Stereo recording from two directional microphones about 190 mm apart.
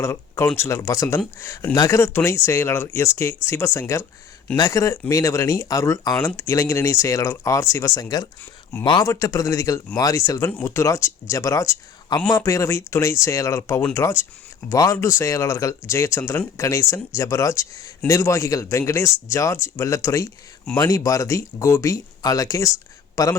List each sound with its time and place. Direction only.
0.0 s a man's voice: 15° left (ahead or behind)